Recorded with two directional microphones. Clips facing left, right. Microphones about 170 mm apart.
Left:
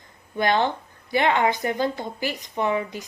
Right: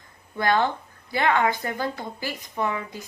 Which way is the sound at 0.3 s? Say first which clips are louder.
Left 1 dB; 20° left (ahead or behind).